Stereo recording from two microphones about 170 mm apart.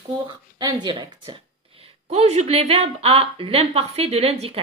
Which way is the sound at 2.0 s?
40° right (ahead or behind).